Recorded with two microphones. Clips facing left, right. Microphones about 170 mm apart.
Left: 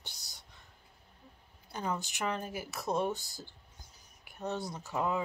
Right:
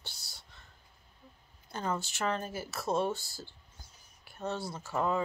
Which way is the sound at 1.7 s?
15° left (ahead or behind).